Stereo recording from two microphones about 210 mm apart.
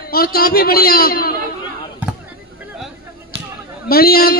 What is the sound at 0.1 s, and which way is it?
Speech, 45° left (ahead or behind).